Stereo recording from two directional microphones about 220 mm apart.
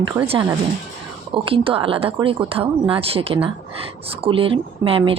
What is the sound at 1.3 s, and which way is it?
Speech, 25° right (ahead or behind).